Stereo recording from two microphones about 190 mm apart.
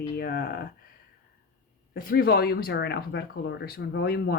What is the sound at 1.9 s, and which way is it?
Speech, 50° left (ahead or behind).